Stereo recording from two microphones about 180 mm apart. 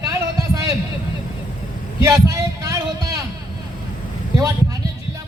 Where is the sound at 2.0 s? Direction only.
15° right (ahead or behind).